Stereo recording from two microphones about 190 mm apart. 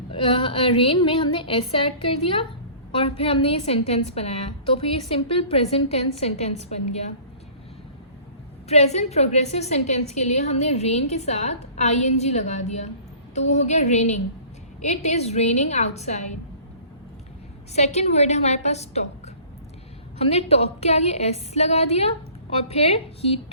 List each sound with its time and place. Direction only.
0.1 s a woman's voice: 25° left (ahead or behind)
8.7 s a woman's voice: 35° left (ahead or behind)
17.7 s a woman's voice: 35° left (ahead or behind)
20.1 s a woman's voice: 35° left (ahead or behind)